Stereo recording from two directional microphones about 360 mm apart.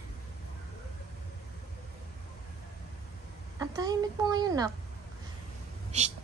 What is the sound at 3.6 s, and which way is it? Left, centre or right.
A woman's voice, centre.